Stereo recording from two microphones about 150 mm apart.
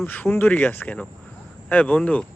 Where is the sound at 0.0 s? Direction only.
15° left (ahead or behind).